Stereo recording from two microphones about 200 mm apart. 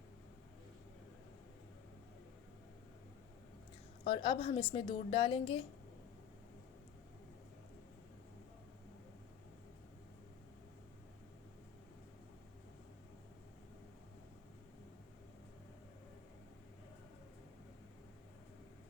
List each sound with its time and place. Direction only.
4.0 s a woman's voice: 25° left (ahead or behind)